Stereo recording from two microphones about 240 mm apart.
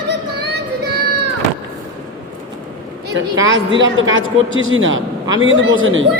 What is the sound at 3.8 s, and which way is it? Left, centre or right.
A man's voice, right.